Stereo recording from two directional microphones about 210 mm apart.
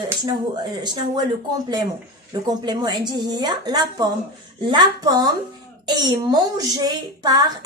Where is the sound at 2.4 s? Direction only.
20° right (ahead or behind).